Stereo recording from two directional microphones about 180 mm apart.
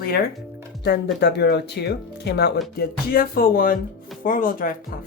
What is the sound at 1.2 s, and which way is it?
Speech, 70° left (ahead or behind).